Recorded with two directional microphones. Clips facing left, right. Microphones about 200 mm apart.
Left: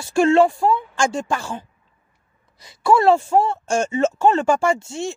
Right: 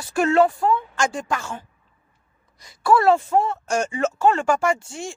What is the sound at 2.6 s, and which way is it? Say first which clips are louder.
A woman's voice: left 2 dB; 25° left (ahead or behind).